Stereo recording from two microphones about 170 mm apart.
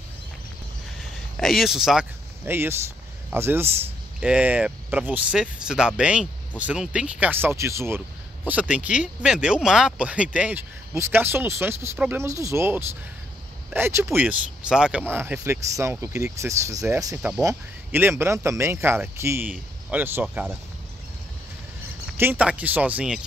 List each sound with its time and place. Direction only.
1.3 s speech: centre (ahead or behind)
22.0 s speech: 10° right (ahead or behind)